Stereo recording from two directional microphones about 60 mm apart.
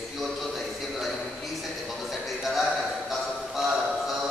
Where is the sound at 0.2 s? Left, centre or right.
Centre.